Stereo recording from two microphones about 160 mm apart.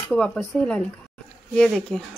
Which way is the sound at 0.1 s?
5° left (ahead or behind).